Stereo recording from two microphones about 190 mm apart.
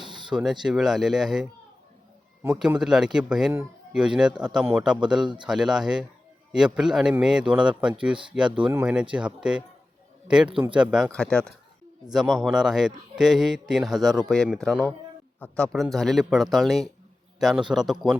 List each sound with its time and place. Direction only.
0.0 s a sound: 25° right (ahead or behind)
0.3 s a man's voice: 5° right (ahead or behind)
5.2 s speech: 25° right (ahead or behind)
5.5 s a man's voice: centre (ahead or behind)